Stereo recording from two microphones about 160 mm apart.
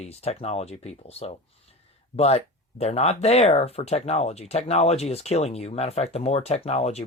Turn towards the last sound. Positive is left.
turn(degrees=40)  # may be behind; listen again after turning